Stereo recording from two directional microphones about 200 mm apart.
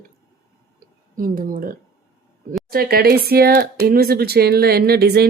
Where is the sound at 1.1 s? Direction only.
45° right (ahead or behind).